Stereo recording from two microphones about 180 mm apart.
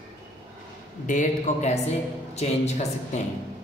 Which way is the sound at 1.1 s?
45° left (ahead or behind).